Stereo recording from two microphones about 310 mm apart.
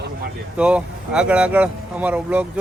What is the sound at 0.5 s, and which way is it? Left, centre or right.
Speech, centre.